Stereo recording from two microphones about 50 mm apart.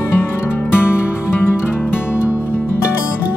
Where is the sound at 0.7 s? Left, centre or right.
Left.